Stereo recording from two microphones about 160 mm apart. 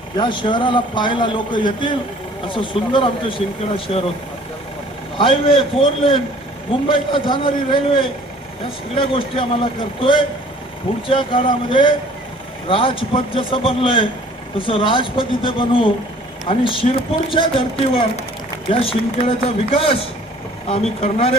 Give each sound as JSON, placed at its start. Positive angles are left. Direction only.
{"t": 0.2, "sound": "a man's voice", "side_deg": 30}
{"t": 5.1, "sound": "a man's voice", "side_deg": 35}
{"t": 18.7, "sound": "a man's voice", "side_deg": 35}